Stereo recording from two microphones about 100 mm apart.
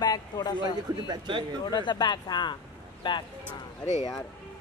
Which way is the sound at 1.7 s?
50° left (ahead or behind).